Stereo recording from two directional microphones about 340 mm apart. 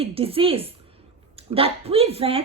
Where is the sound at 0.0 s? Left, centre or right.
Centre.